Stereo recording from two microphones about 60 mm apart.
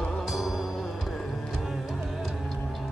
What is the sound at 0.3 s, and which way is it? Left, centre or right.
Music, centre.